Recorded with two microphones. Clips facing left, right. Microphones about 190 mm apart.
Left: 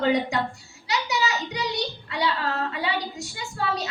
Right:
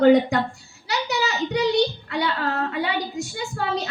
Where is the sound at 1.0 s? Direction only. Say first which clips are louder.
Right 4 dB; 55° right (ahead or behind).